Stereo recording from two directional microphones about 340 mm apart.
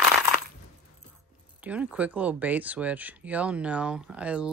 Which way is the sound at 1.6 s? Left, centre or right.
Centre.